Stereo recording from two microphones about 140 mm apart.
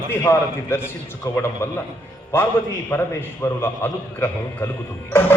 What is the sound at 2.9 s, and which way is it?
Music, 15° left (ahead or behind).